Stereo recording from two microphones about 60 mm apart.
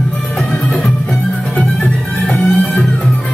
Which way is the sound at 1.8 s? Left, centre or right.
Left.